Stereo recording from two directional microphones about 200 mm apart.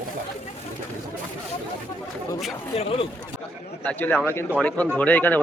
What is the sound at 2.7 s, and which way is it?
Speech, 30° left (ahead or behind).